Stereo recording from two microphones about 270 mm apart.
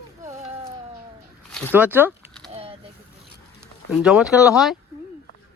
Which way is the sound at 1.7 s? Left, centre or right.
Centre.